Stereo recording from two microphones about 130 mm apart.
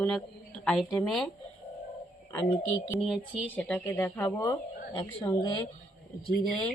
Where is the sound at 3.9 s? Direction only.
20° left (ahead or behind).